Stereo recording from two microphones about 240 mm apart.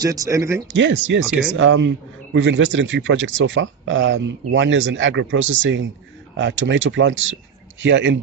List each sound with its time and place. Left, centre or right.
0.0 s speech: centre
0.7 s speech: right